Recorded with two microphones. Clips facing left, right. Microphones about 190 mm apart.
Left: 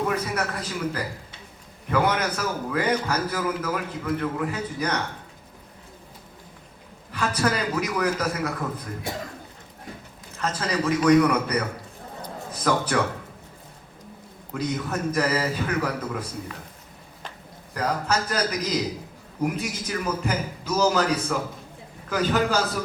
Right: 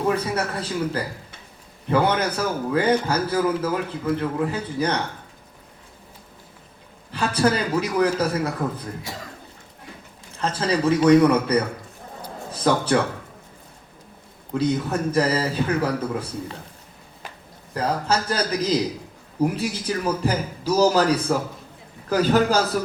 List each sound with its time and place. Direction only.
0.1 s a man's voice: 30° right (ahead or behind)
7.1 s a man's voice: 30° right (ahead or behind)
10.3 s a man's voice: 30° right (ahead or behind)
14.6 s a man's voice: 30° right (ahead or behind)
17.7 s a man's voice: 30° right (ahead or behind)